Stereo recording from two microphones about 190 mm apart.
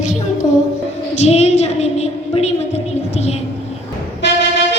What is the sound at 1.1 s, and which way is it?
A woman's voice, 35° left (ahead or behind).